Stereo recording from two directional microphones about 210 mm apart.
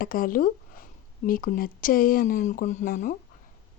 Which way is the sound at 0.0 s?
40° left (ahead or behind).